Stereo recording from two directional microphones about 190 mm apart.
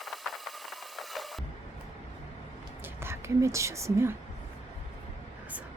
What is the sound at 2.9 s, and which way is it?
Speech, 15° right (ahead or behind).